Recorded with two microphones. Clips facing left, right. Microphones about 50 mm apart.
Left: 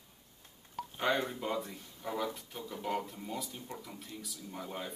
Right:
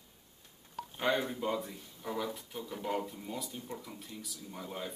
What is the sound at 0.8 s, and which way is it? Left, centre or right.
Speech, centre.